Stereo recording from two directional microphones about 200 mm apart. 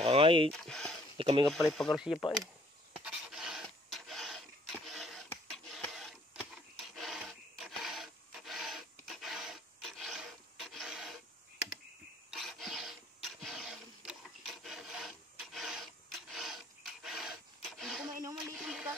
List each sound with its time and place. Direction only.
0.0 s speech: 30° right (ahead or behind)
0.5 s speech: centre (ahead or behind)
1.1 s speech: 25° right (ahead or behind)
1.5 s speech: centre (ahead or behind)
3.0 s filing: centre (ahead or behind)
12.3 s filing: centre (ahead or behind)
18.4 s a sound: 5° right (ahead or behind)